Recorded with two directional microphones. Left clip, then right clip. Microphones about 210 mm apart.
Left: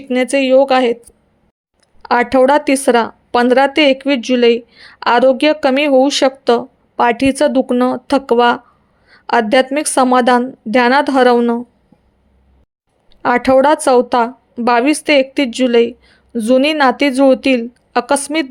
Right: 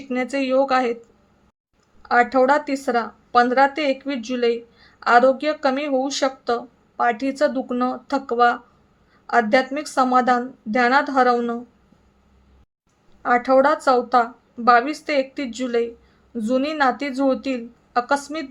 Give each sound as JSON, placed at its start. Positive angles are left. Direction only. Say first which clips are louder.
{"t": 0.1, "sound": "speech", "louder": "left 10 dB", "side_deg": 35}
{"t": 2.0, "sound": "speech", "louder": "left 5 dB", "side_deg": 35}
{"t": 13.2, "sound": "speech", "louder": "left 6 dB", "side_deg": 40}